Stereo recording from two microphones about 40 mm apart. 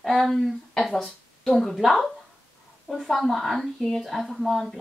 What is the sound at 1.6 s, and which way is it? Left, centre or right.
Speech, centre.